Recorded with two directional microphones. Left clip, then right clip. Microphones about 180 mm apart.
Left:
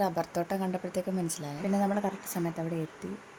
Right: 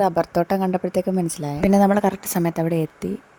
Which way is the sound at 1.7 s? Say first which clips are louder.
Right 12 dB; 60° right (ahead or behind).